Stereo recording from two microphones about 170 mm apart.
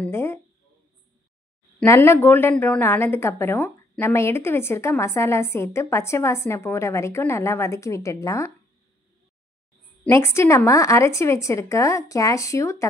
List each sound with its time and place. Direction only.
0.0 s a woman's voice: 15° left (ahead or behind)
1.9 s a woman's voice: 15° left (ahead or behind)
10.0 s a woman's voice: 15° left (ahead or behind)